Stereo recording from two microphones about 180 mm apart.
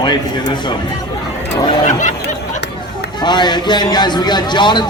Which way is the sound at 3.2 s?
25° left (ahead or behind).